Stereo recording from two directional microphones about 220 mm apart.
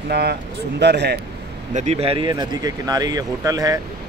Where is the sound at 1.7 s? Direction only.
30° right (ahead or behind).